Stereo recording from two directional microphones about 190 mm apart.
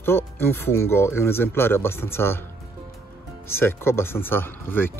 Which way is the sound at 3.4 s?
10° left (ahead or behind).